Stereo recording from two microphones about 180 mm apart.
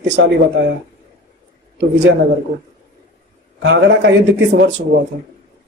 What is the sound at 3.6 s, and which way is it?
Speech, 80° right.